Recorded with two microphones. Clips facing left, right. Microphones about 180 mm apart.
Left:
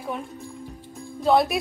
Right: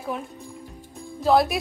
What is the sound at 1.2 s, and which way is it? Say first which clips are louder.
Speech: even; centre (ahead or behind).